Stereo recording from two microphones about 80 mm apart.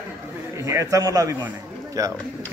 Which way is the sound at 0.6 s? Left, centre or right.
Right.